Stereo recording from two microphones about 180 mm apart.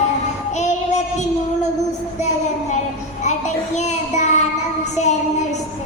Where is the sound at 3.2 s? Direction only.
40° left (ahead or behind).